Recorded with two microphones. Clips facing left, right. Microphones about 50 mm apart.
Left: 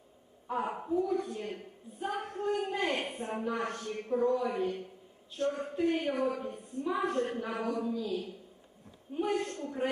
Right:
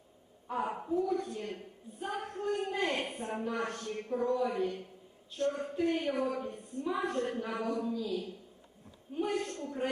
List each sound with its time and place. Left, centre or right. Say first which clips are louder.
0.8 s a man's voice: left 1 dB; centre
5.7 s a man's voice: left 3 dB; centre
6.0 s a woman's voice: left 1 dB; centre
6.2 s a man's voice: left 2 dB; centre
9.1 s a man's voice: left 2 dB; centre